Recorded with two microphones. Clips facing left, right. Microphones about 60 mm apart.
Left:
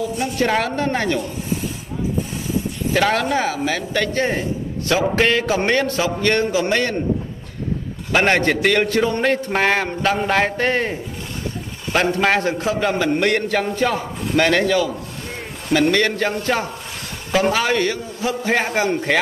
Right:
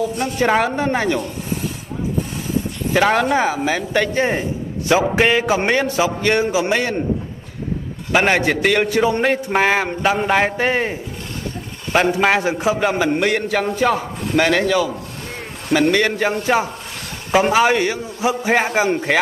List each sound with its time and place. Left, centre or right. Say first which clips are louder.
0.4 s a man's voice: right 3 dB; centre
2.9 s a man's voice: right 3 dB; centre
8.1 s a man's voice: right 1 dB; centre
13.2 s a man's voice: even; centre